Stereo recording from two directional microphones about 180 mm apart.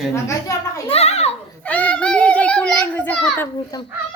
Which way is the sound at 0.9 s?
35° left (ahead or behind).